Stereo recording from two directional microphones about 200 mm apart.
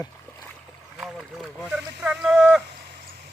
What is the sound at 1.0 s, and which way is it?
Boat, centre (ahead or behind).